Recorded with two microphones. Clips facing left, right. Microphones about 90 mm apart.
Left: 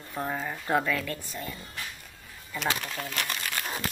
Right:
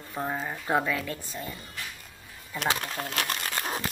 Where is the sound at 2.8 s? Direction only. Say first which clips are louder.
Right 2 dB; 45° right (ahead or behind).